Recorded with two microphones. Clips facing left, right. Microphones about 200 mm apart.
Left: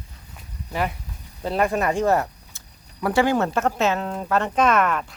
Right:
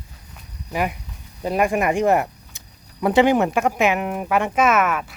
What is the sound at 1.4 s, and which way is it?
Speech, 15° right (ahead or behind).